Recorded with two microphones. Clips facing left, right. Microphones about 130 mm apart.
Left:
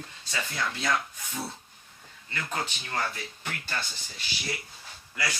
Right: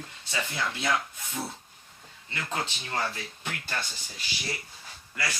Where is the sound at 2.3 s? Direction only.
15° right (ahead or behind).